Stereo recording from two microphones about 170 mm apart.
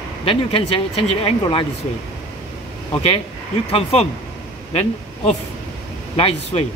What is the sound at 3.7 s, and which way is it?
Speech, 35° left (ahead or behind).